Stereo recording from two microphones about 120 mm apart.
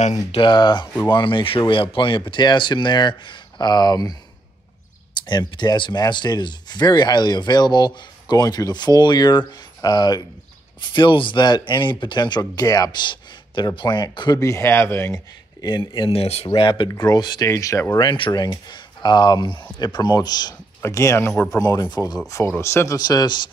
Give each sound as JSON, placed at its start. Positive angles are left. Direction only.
{"t": 0.0, "sound": "speech", "side_deg": 75}
{"t": 0.4, "sound": "speech", "side_deg": 40}
{"t": 5.2, "sound": "speech", "side_deg": 35}
{"t": 14.4, "sound": "speech", "side_deg": 25}
{"t": 16.4, "sound": "speech", "side_deg": 45}
{"t": 16.9, "sound": "speech", "side_deg": 30}
{"t": 18.0, "sound": "speech", "side_deg": 40}
{"t": 22.6, "sound": "speech", "side_deg": 20}